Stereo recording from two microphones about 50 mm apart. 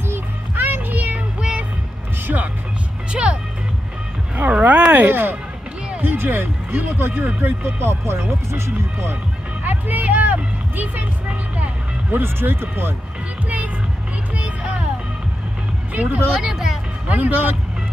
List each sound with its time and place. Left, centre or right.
0.1 s music: right
3.1 s music: right
4.5 s a sound: right
5.0 s speech: right
5.9 s a sound: right
7.0 s speech: right
9.7 s vehicle: right
12.1 s speech: right
15.9 s speech: right
16.3 s speech: centre
17.1 s speech: right